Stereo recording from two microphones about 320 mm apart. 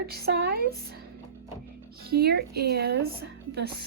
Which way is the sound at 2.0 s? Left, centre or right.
Right.